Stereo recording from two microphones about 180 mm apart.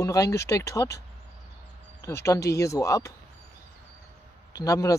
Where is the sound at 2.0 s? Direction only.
15° left (ahead or behind).